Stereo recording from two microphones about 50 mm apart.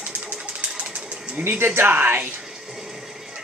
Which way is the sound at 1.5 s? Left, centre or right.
Right.